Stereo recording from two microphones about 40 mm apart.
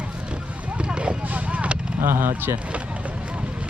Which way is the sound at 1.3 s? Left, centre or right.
Right.